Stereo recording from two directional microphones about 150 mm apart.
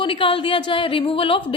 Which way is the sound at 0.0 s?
35° left (ahead or behind).